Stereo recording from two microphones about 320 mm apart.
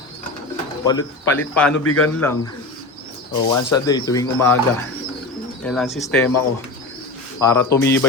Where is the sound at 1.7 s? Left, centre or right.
Left.